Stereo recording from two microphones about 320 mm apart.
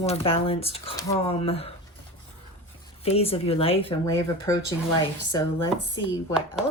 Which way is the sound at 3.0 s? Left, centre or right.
Centre.